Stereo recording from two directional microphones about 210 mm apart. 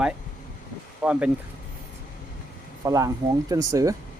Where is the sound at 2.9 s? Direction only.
15° right (ahead or behind).